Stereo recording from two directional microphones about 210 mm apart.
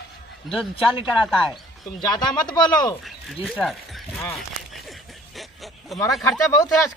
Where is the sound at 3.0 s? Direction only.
5° left (ahead or behind).